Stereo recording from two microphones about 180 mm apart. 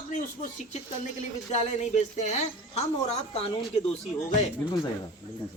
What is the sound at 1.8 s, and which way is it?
Speech, 40° left (ahead or behind).